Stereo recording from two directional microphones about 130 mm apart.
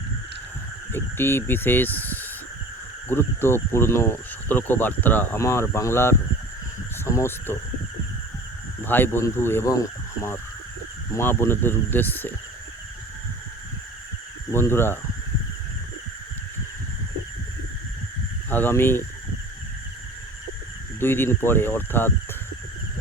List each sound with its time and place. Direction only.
0.9 s speech: 20° left (ahead or behind)
8.8 s speech: 15° left (ahead or behind)
11.1 s speech: 20° left (ahead or behind)
14.5 s speech: 20° left (ahead or behind)
18.5 s speech: 15° left (ahead or behind)
21.0 s speech: 15° left (ahead or behind)